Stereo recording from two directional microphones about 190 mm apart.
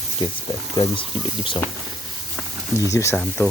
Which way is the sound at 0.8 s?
25° left (ahead or behind).